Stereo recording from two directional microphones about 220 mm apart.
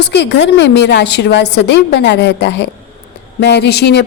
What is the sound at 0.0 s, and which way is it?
Speech, 50° left (ahead or behind).